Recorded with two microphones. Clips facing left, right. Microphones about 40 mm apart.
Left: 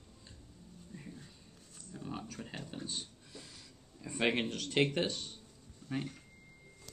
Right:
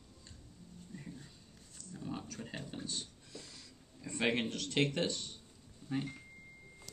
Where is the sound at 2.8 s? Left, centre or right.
Centre.